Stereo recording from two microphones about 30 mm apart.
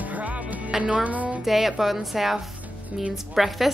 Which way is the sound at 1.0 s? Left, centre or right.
Right.